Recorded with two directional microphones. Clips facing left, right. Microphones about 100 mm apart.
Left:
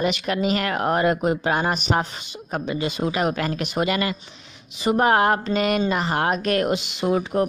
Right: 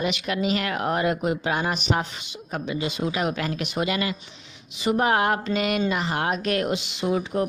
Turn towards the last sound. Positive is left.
turn(degrees=50)  # may be behind; listen again after turning